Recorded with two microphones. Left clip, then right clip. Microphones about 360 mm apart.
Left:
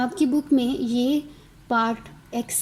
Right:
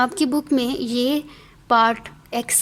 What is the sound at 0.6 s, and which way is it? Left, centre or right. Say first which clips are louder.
Speech: right 2 dB; right.